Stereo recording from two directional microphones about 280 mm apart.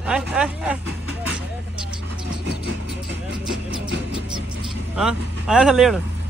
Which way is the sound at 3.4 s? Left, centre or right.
Centre.